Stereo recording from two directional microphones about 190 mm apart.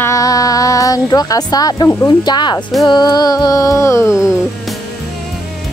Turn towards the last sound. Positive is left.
turn(degrees=-5)  # may be behind; listen again after turning